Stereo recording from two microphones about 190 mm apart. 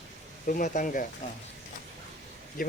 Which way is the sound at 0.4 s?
45° left (ahead or behind).